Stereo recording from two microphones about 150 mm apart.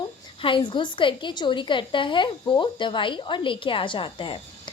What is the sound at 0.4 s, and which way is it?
A woman's voice, 35° left (ahead or behind).